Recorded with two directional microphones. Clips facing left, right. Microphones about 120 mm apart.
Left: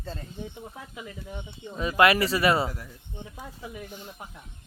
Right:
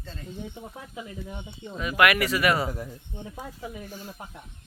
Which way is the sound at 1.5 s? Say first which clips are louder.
Left 3 dB; 30° left (ahead or behind).